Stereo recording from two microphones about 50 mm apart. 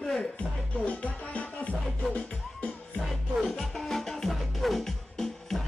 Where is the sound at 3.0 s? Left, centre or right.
Centre.